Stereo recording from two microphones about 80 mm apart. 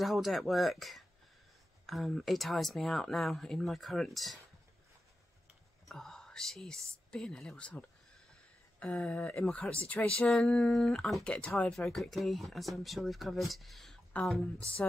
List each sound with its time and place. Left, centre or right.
0.0 s speech: centre
5.9 s speech: centre
11.2 s speech: centre
14.1 s speech: centre